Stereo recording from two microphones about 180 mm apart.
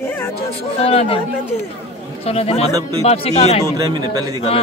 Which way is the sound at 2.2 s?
35° left (ahead or behind).